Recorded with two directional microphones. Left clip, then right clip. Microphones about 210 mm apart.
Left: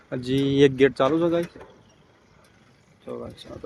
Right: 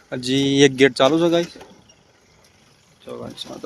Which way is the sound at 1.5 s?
45° right (ahead or behind).